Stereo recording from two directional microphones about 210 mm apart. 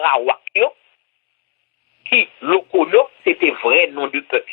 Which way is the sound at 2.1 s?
45° left (ahead or behind).